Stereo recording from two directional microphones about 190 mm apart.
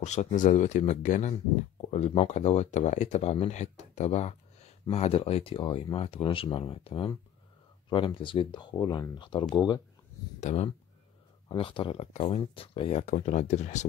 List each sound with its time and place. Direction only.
0.0 s speech: 35° left (ahead or behind)